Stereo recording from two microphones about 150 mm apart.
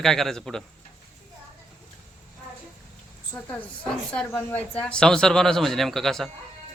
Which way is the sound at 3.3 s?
10° left (ahead or behind).